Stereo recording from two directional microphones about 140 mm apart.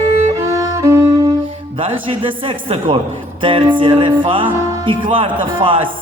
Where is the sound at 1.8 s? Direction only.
40° right (ahead or behind).